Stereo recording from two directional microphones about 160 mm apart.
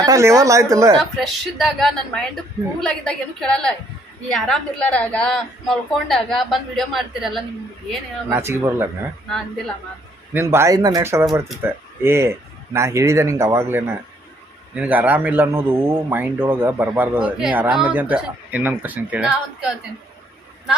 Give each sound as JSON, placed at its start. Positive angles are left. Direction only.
{"t": 0.0, "sound": "speech", "side_deg": -20}
{"t": 0.9, "sound": "a woman's voice", "side_deg": 0}
{"t": 8.3, "sound": "a man's voice", "side_deg": -15}
{"t": 10.3, "sound": "a man's voice", "side_deg": -15}